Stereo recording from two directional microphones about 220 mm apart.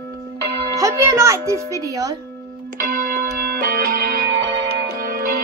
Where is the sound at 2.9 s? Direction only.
45° right (ahead or behind).